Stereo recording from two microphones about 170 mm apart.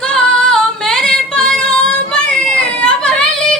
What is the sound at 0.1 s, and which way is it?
Female singing, 5° left (ahead or behind).